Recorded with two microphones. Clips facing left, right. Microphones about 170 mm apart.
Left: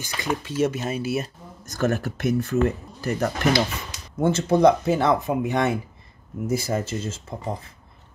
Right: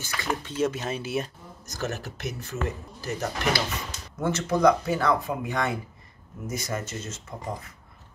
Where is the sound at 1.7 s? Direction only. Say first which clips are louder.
Left 8 dB; 55° left (ahead or behind).